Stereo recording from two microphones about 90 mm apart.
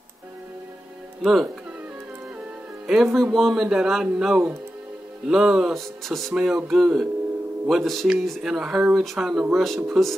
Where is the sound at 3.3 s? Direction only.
5° right (ahead or behind).